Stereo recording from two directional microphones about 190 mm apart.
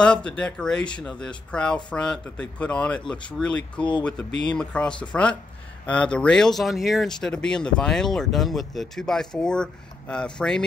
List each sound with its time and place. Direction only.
0.0 s speech: 5° left (ahead or behind)